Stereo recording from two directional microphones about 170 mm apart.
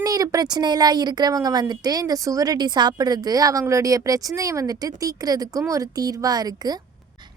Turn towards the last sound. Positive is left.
turn(degrees=-25)  # may be behind; listen again after turning